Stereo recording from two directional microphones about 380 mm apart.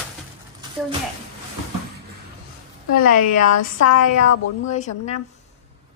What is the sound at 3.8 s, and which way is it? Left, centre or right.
Speech, left.